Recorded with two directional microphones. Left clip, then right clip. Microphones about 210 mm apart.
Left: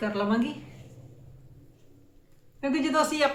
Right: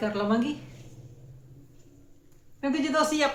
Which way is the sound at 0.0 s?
5° left (ahead or behind).